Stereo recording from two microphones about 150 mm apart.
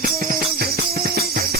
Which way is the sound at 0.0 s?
75° right (ahead or behind).